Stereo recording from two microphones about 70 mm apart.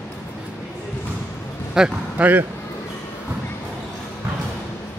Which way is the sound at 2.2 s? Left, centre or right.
Right.